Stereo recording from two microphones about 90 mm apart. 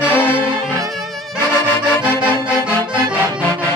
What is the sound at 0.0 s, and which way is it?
Music, 20° left (ahead or behind).